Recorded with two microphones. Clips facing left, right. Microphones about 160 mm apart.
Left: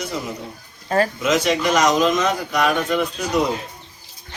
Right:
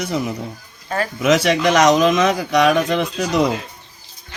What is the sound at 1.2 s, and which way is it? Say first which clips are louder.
Speech: right 3 dB; 75° right (ahead or behind).